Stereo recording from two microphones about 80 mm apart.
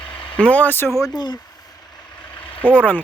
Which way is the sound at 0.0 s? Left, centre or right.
Left.